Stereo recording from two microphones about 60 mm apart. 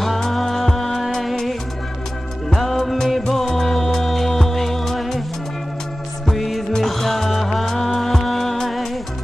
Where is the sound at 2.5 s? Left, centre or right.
Centre.